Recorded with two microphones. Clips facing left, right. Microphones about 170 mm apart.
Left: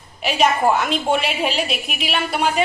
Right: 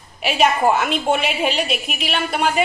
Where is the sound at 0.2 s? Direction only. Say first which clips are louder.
Even; centre (ahead or behind).